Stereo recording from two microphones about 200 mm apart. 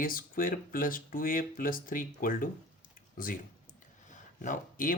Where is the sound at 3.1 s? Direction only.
45° left (ahead or behind).